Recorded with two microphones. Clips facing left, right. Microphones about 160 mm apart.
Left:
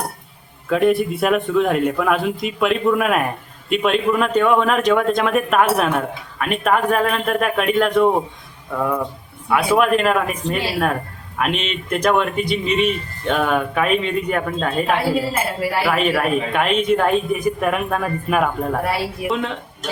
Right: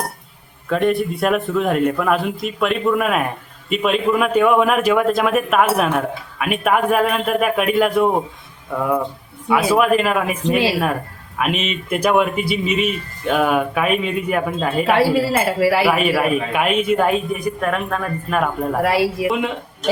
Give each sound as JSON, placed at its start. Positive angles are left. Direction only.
{"t": 0.7, "sound": "speech", "side_deg": 0}
{"t": 14.9, "sound": "speech", "side_deg": -90}
{"t": 15.8, "sound": "speech", "side_deg": -10}
{"t": 18.8, "sound": "speech", "side_deg": -90}